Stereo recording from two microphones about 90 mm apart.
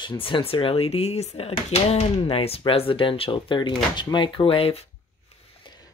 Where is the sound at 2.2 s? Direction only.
90° left.